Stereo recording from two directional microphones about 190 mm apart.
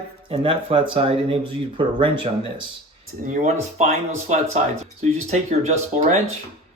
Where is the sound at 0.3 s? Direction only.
30° right (ahead or behind).